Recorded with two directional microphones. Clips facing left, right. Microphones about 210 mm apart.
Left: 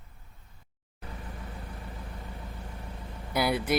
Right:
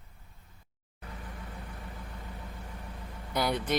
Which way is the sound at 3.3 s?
10° left (ahead or behind).